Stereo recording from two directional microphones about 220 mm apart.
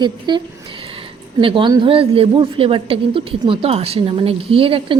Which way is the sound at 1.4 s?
20° right (ahead or behind).